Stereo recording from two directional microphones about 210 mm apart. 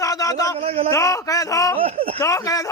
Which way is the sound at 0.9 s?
15° left (ahead or behind).